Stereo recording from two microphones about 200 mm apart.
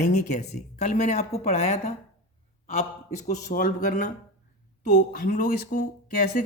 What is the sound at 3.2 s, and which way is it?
Speech, 40° left (ahead or behind).